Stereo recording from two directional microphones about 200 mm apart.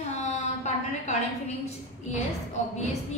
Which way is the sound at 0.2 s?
35° left (ahead or behind).